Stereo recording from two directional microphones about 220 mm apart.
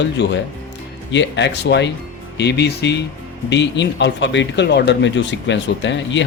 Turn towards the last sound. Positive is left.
turn(degrees=55)  # may be behind; listen again after turning